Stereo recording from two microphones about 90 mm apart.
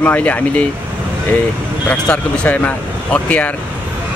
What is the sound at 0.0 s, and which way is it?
Speech, 15° left (ahead or behind).